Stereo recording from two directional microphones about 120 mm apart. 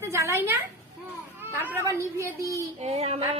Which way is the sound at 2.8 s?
60° right (ahead or behind).